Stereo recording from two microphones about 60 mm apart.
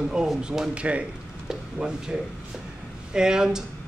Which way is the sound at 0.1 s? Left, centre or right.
Centre.